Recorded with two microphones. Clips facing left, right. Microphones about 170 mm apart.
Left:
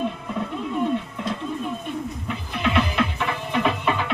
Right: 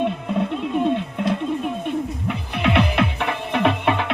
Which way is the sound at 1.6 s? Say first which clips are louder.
Right 5 dB; 65° right (ahead or behind).